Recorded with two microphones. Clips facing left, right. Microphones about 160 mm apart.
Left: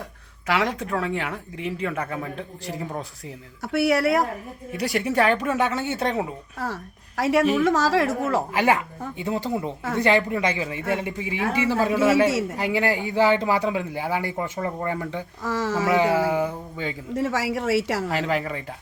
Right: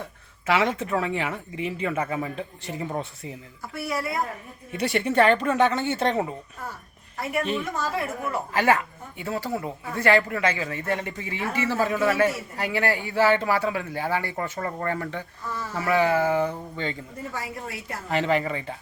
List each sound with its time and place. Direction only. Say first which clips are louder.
0.4 s speech: right 1 dB; centre (ahead or behind)
3.6 s speech: left 10 dB; 75° left (ahead or behind)
4.7 s speech: even; centre (ahead or behind)
7.2 s a woman's voice: left 8 dB; 90° left
8.5 s speech: left 1 dB; 15° left (ahead or behind)
15.4 s a woman's voice: left 8 dB; 90° left
15.9 s speech: even; 15° left (ahead or behind)
17.2 s a woman's voice: left 10 dB; 90° left
18.1 s speech: right 1 dB; centre (ahead or behind)